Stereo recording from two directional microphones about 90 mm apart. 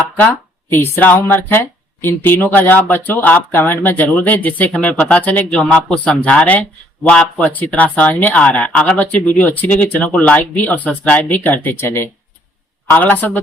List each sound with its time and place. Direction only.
0.7 s speech: 20° left (ahead or behind)